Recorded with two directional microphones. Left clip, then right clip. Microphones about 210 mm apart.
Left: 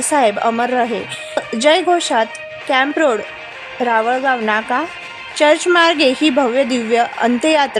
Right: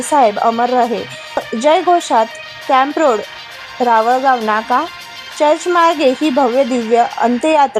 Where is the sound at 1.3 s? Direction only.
5° right (ahead or behind).